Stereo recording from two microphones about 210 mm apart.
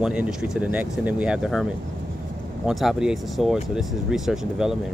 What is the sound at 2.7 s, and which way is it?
Speech, centre (ahead or behind).